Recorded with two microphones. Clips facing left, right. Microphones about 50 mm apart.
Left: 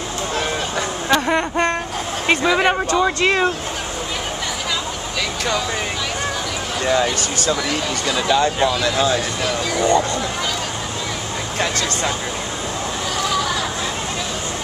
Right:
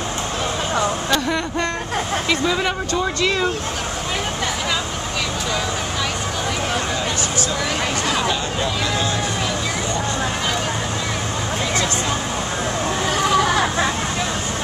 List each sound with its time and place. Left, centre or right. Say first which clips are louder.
1.1 s speech: left 3 dB; left
2.2 s speech: left 7 dB; left
13.2 s vehicle: right 4 dB; right